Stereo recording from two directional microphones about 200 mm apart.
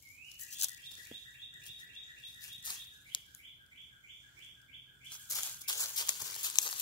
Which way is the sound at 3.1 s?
25° left (ahead or behind).